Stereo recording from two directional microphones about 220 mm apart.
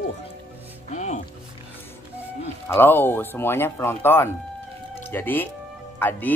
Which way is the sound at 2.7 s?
10° left (ahead or behind).